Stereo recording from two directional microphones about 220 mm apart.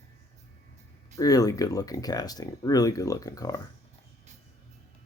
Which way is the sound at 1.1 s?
15° left (ahead or behind).